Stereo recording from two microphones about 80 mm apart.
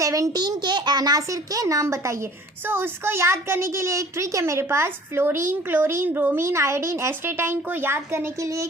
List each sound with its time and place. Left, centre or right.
0.0 s a child's voice: right
0.3 s a child's voice: right